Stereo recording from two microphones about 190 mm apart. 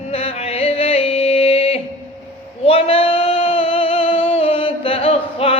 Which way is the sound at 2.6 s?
30° left (ahead or behind).